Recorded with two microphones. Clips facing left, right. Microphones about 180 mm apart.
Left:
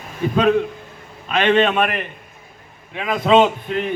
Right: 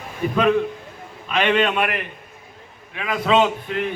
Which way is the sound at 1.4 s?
25° left (ahead or behind).